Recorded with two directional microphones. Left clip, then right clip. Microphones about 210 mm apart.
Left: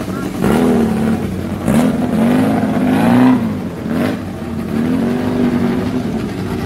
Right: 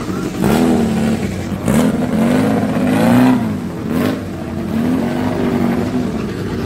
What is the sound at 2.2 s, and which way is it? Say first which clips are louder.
Vehicle: left 1 dB; 40° right (ahead or behind).